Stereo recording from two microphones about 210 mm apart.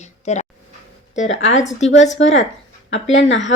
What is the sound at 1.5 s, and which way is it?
Speech, 35° left (ahead or behind).